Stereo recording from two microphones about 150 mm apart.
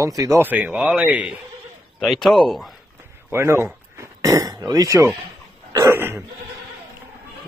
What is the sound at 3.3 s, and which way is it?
A man's voice, 15° right (ahead or behind).